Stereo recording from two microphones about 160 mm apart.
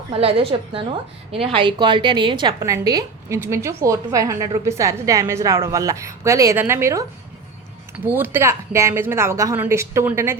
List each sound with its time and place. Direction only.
0.1 s a woman's voice: 35° right (ahead or behind); by 10.3 s 15° right (ahead or behind)